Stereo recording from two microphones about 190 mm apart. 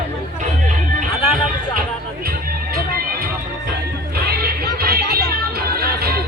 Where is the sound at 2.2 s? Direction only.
50° right (ahead or behind).